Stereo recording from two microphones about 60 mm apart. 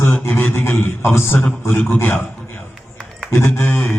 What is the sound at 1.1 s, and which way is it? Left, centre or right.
Speech, left.